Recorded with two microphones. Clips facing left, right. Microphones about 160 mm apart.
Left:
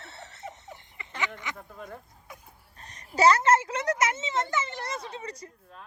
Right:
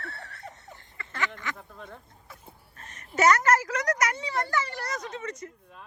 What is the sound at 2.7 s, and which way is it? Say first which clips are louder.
Speech: left 1 dB; 35° left (ahead or behind).